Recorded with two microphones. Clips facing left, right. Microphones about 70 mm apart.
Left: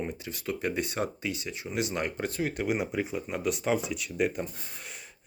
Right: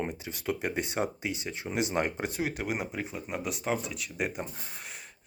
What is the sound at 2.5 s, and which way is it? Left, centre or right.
Speech, centre.